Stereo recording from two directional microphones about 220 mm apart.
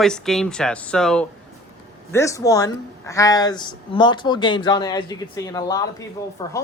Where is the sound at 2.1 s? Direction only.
15° left (ahead or behind).